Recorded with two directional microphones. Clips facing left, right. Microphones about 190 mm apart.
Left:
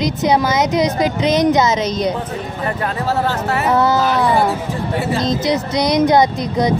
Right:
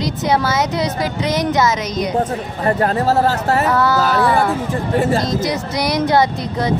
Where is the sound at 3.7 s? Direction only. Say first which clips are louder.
Left 1 dB; 20° left (ahead or behind).